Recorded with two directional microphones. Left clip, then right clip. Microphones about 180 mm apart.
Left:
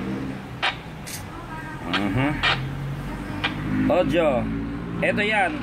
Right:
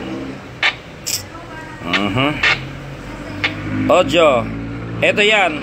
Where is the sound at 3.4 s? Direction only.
25° right (ahead or behind).